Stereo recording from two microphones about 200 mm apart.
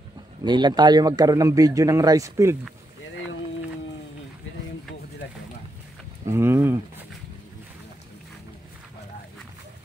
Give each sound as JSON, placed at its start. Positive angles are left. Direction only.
{"t": 0.4, "sound": "a man's voice", "side_deg": -20}
{"t": 5.2, "sound": "a sound", "side_deg": 60}
{"t": 6.2, "sound": "speech", "side_deg": -10}